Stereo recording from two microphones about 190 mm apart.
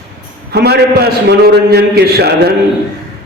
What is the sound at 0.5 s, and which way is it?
A man's voice, 55° right (ahead or behind).